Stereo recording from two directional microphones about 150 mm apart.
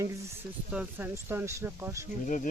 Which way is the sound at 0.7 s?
10° right (ahead or behind).